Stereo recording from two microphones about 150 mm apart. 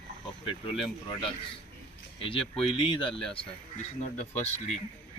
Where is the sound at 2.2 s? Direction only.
35° left (ahead or behind).